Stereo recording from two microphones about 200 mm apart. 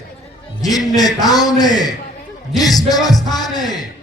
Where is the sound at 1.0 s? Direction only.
20° left (ahead or behind).